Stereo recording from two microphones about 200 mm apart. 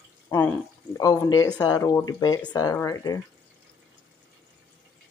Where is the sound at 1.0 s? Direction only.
15° left (ahead or behind).